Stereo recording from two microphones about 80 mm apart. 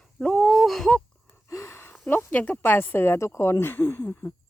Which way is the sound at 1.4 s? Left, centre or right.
Left.